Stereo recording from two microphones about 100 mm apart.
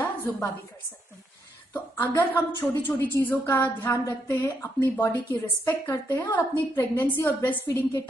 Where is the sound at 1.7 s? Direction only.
20° left (ahead or behind).